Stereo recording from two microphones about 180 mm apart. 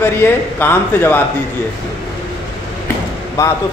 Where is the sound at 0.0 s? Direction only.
10° left (ahead or behind).